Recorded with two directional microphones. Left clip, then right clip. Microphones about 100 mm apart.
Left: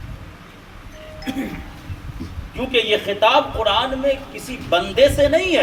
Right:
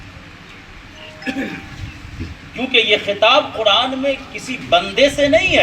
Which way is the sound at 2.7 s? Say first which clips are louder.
Right 4 dB; 55° left (ahead or behind).